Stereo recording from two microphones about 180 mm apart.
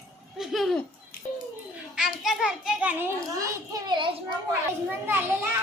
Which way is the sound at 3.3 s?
20° right (ahead or behind).